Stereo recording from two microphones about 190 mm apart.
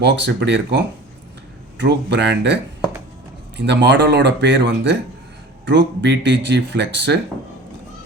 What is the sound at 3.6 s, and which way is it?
Speech, 65° right (ahead or behind).